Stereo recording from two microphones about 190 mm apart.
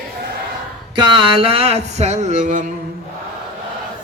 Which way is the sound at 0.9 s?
25° right (ahead or behind).